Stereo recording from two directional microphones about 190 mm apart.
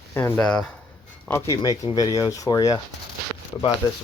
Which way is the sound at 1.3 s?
15° left (ahead or behind).